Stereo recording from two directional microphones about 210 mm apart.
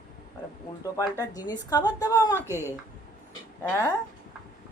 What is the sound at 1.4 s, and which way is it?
A woman's voice, 20° left (ahead or behind).